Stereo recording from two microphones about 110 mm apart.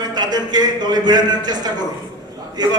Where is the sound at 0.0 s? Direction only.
40° right (ahead or behind).